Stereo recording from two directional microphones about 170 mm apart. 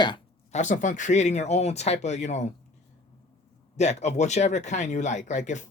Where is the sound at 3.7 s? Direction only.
40° left (ahead or behind).